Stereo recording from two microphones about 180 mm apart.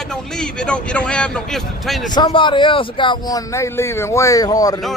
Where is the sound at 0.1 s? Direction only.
5° left (ahead or behind).